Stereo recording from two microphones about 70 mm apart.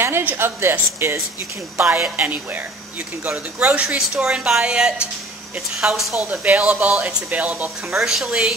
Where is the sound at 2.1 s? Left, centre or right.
Right.